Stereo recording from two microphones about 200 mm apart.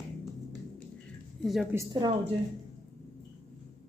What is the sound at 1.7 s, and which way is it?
Speech, 20° right (ahead or behind).